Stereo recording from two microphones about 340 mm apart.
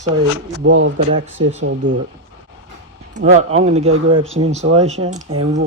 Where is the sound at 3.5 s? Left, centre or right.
Centre.